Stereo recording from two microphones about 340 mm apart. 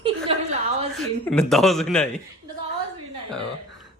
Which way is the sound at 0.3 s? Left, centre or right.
Centre.